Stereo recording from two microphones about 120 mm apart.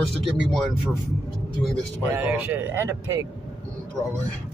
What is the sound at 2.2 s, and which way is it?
Speech, 15° right (ahead or behind).